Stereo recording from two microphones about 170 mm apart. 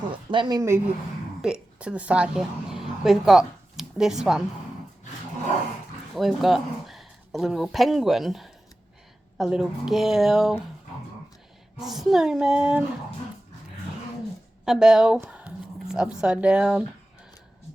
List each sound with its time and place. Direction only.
0.3 s speech: 25° right (ahead or behind)
1.4 s a woman's voice: 5° right (ahead or behind)
6.1 s speech: centre (ahead or behind)
11.8 s speech: centre (ahead or behind)
14.6 s a sound: 5° right (ahead or behind)
16.2 s speech: 5° right (ahead or behind)